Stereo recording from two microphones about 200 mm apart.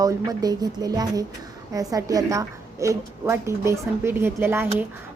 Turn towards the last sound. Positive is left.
turn(degrees=-10)  # may be behind; listen again after turning